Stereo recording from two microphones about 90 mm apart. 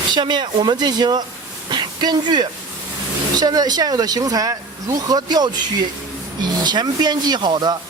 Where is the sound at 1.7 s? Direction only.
55° right (ahead or behind).